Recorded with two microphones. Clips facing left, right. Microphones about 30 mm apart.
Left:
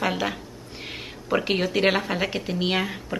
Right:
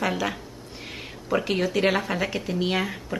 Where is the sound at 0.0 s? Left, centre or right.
Centre.